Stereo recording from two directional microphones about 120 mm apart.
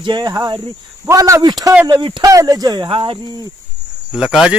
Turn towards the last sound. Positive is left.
turn(degrees=-5)  # may be behind; listen again after turning